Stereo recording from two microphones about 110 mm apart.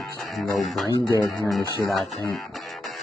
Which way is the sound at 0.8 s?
30° left (ahead or behind).